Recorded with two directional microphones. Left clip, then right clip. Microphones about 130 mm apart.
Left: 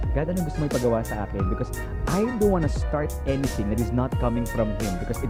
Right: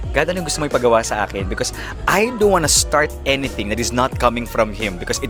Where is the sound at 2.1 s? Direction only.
25° right (ahead or behind).